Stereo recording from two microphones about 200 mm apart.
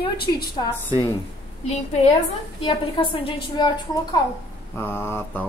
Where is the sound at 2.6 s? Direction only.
25° left (ahead or behind).